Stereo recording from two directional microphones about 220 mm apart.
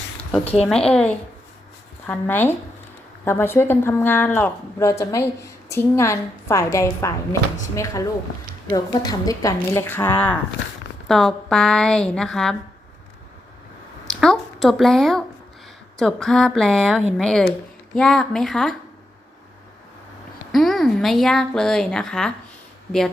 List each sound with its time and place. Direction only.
0.2 s a sound: 5° left (ahead or behind)
0.4 s speech: 25° left (ahead or behind)
0.7 s a woman's voice: 5° left (ahead or behind)
14.1 s speech: centre (ahead or behind)
20.5 s speech: centre (ahead or behind)